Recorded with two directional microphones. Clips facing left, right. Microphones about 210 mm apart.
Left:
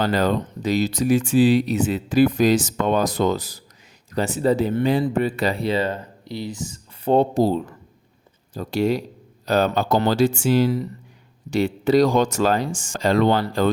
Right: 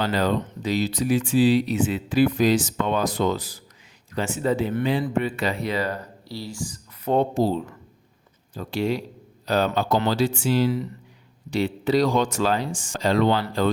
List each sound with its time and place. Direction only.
0.0 s speech: 45° left (ahead or behind)
8.5 s speech: 40° left (ahead or behind)